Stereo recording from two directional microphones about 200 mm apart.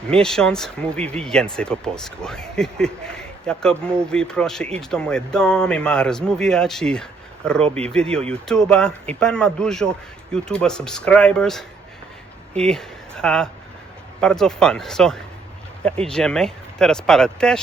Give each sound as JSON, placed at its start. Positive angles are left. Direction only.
{"t": 0.1, "sound": "speech", "side_deg": 5}
{"t": 7.6, "sound": "speech", "side_deg": -30}
{"t": 8.3, "sound": "speech", "side_deg": 5}